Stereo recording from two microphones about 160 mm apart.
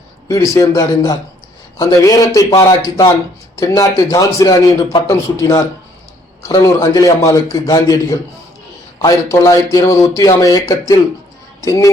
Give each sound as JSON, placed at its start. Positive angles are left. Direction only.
{"t": 0.3, "sound": "speech", "side_deg": 20}